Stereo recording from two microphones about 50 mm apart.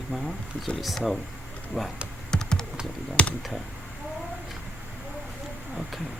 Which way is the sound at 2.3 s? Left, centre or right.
Centre.